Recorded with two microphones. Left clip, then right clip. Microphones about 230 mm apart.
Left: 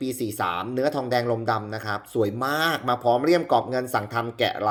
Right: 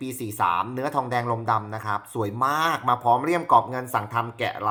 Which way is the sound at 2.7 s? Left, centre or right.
Centre.